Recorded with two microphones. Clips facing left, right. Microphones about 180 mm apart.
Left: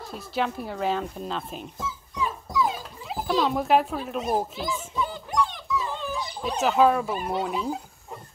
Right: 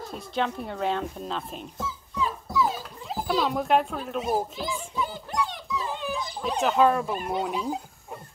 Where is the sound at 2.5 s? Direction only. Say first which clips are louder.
Even; 15° left (ahead or behind).